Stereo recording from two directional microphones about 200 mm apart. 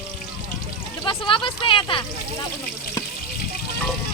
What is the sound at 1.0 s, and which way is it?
Speech, 25° left (ahead or behind).